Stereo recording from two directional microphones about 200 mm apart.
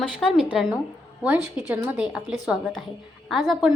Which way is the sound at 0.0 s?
Centre (ahead or behind).